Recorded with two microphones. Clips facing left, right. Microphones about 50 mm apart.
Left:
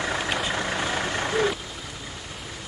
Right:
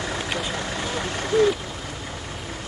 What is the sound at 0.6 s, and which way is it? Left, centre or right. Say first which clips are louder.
Vehicle: left 1 dB; left.